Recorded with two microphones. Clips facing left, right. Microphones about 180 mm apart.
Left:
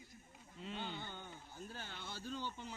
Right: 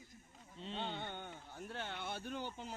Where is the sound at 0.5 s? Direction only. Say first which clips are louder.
Right 2 dB; 25° right (ahead or behind).